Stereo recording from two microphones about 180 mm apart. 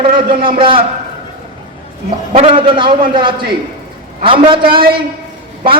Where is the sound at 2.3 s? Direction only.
35° right (ahead or behind).